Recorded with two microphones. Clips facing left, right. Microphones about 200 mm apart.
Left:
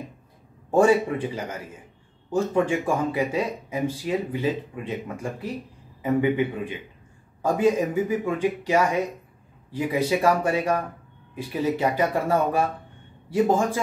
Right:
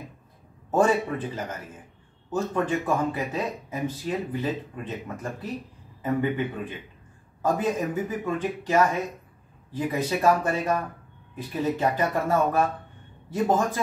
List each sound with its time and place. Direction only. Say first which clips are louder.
0.7 s speech: left 4 dB; 10° left (ahead or behind)